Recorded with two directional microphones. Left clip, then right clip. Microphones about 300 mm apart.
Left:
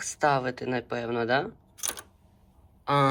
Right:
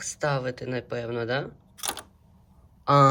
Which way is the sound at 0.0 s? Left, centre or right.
Centre.